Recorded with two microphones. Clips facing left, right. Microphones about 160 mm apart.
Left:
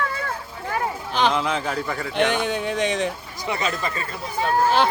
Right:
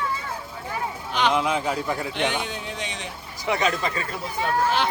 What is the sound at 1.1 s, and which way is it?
Speech, 35° left (ahead or behind).